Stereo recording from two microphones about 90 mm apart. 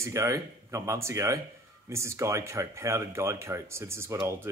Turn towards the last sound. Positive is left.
turn(degrees=-30)  # may be behind; listen again after turning